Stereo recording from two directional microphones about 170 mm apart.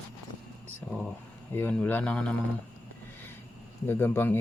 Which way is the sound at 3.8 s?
15° left (ahead or behind).